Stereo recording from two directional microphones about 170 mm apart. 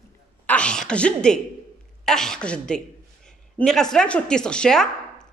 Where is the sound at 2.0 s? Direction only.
5° left (ahead or behind).